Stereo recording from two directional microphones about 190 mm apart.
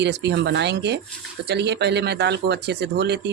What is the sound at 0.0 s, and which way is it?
Speech, 65° right (ahead or behind).